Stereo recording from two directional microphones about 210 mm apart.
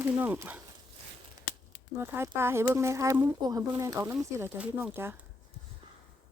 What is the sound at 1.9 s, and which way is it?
Speech, 10° right (ahead or behind).